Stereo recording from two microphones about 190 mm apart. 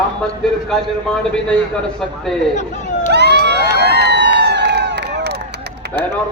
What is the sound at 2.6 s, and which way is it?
Speech, 40° left (ahead or behind).